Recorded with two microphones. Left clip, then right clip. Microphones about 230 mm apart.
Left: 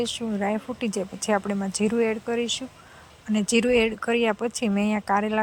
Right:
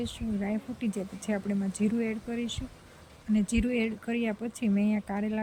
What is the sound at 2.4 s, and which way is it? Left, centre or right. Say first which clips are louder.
Speech: left 9 dB; centre.